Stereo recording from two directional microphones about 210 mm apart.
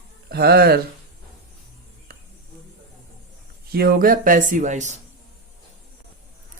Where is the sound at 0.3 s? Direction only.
50° right (ahead or behind).